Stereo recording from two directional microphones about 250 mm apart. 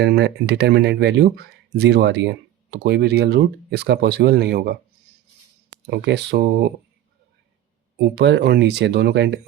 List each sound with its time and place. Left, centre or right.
0.0 s speech: right
5.9 s speech: right
7.9 s speech: right